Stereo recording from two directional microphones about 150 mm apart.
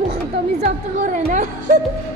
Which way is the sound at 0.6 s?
55° right (ahead or behind).